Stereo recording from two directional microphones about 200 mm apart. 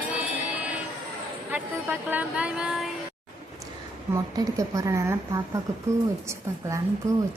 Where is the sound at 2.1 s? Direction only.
5° right (ahead or behind).